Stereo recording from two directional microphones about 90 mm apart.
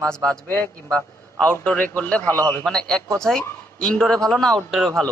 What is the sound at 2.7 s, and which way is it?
A man's voice, 5° left (ahead or behind).